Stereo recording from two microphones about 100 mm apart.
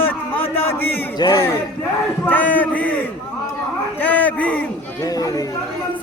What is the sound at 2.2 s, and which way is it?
Speech, 15° left (ahead or behind).